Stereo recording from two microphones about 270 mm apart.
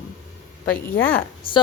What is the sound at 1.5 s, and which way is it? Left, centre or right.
Speech, centre.